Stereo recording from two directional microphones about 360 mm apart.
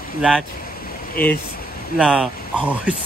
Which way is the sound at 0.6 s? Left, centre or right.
Left.